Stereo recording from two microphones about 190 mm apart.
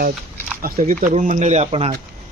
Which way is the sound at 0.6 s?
45° right (ahead or behind).